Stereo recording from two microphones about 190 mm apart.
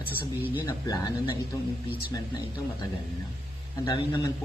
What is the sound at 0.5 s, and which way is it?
Speech, 20° left (ahead or behind).